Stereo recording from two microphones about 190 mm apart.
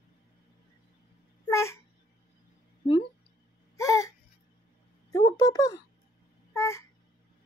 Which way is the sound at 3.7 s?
15° left (ahead or behind).